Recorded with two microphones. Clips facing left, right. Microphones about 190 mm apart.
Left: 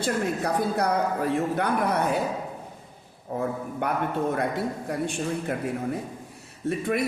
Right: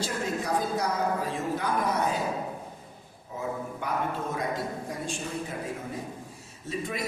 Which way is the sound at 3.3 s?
60° left (ahead or behind).